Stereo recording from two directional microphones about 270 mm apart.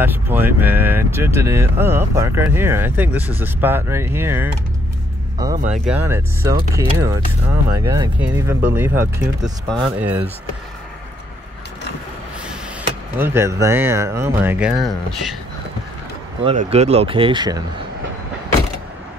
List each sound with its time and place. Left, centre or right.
0.0 s speech: centre
13.2 s speech: centre
16.4 s speech: right